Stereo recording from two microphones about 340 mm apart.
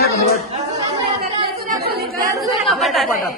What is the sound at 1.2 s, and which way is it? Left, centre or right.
Chatter, right.